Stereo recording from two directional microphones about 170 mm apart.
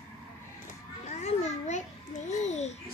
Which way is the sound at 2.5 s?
40° left (ahead or behind).